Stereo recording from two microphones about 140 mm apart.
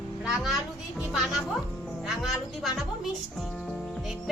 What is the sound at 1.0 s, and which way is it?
A woman's voice, centre (ahead or behind).